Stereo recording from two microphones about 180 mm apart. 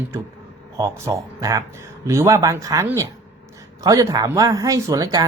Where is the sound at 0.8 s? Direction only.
20° right (ahead or behind).